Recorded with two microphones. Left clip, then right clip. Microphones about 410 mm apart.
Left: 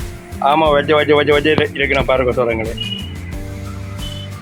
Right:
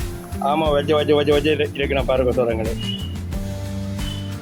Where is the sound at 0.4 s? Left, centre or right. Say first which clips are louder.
Left 6 dB; right.